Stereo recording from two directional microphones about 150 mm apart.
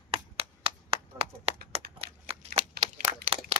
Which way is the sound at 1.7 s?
40° right (ahead or behind).